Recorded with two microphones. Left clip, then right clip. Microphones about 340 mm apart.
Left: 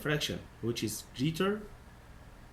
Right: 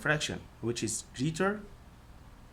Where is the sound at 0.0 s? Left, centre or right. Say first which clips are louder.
Right 3 dB; right.